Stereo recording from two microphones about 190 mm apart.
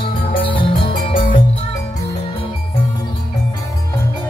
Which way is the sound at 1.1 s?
45° left (ahead or behind).